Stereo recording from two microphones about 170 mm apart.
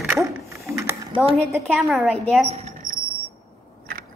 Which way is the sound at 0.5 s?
15° right (ahead or behind).